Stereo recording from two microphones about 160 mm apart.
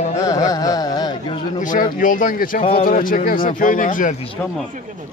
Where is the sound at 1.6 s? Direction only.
55° left (ahead or behind).